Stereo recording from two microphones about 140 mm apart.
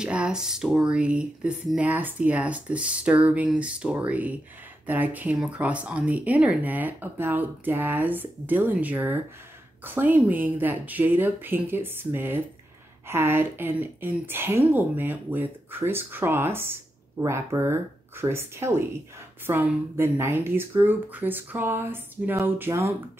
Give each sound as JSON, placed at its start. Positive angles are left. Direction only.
{"t": 0.0, "sound": "speech", "side_deg": -5}